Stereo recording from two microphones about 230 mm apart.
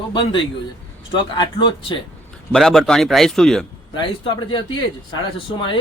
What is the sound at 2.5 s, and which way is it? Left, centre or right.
Speech, centre.